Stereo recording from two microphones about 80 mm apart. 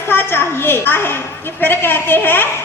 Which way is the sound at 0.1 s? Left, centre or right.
Left.